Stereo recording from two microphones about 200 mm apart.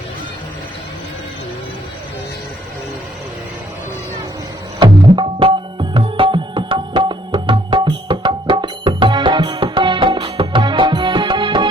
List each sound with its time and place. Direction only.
4.8 s music: 25° right (ahead or behind)